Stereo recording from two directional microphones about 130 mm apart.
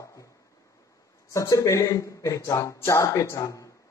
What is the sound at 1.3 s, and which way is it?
A man's voice, 25° left (ahead or behind).